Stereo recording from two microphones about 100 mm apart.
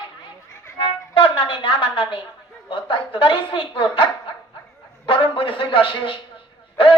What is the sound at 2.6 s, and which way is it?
A woman's voice, 60° left (ahead or behind).